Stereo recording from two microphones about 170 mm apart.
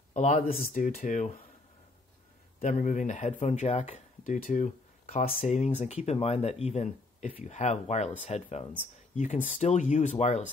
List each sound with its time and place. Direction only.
0.1 s speech: 45° left (ahead or behind)
2.6 s speech: 50° left (ahead or behind)